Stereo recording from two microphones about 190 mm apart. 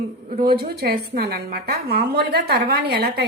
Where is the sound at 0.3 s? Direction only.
50° right (ahead or behind).